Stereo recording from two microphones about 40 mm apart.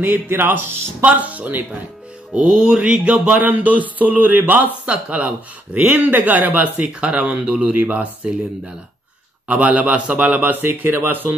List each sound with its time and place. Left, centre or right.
0.0 s speech: right
1.0 s speech: right
2.3 s music: right
3.3 s a sound: right
4.8 s speech: right
6.9 s music: right
7.7 s speech: right
9.5 s speech: right
10.4 s speech: right